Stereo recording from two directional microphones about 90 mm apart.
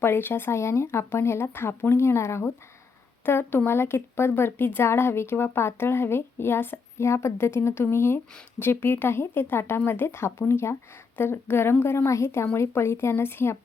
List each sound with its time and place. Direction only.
0.0 s speech: 25° left (ahead or behind)